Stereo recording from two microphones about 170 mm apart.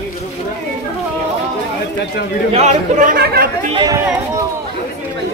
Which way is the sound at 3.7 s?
25° right (ahead or behind).